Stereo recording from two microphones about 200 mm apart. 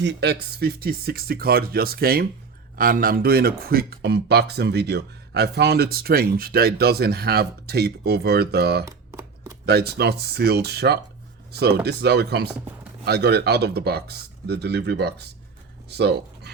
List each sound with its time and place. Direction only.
0.0 s speech: 60° right (ahead or behind)
8.9 s a sound: 15° right (ahead or behind)
9.6 s speech: 50° right (ahead or behind)